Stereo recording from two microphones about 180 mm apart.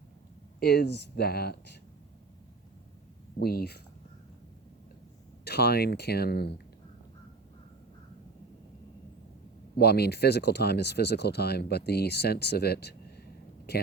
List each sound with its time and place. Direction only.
0.6 s speech: 65° left (ahead or behind)
3.4 s speech: 60° left (ahead or behind)
5.5 s speech: 65° left (ahead or behind)
9.7 s speech: 65° left (ahead or behind)